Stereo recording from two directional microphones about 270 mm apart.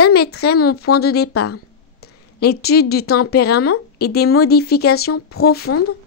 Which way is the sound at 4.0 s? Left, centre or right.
Left.